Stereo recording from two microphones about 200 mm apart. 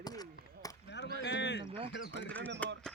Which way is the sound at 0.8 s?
60° left (ahead or behind).